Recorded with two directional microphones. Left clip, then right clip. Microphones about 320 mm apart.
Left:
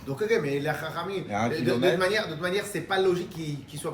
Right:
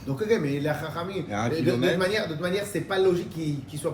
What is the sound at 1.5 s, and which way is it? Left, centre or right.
A man's voice, centre.